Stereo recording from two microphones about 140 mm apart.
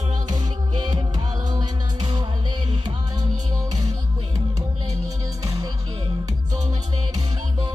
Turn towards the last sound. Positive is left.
turn(degrees=-30)  # may be behind; listen again after turning